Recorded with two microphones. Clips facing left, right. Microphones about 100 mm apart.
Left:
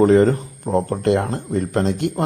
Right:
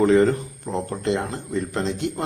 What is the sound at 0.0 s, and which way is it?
Speech, 40° left (ahead or behind).